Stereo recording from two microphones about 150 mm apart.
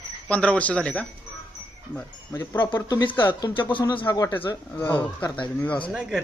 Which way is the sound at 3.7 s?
35° left (ahead or behind).